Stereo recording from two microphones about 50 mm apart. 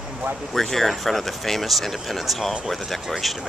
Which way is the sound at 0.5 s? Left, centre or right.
Centre.